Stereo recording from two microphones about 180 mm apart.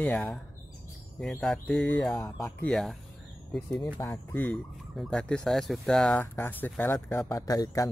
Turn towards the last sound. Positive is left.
turn(degrees=20)  # may be behind; listen again after turning